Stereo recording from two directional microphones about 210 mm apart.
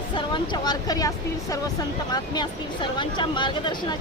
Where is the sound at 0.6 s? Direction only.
20° left (ahead or behind).